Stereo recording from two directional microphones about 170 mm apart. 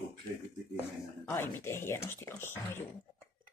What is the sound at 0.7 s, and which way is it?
Speech, 15° left (ahead or behind).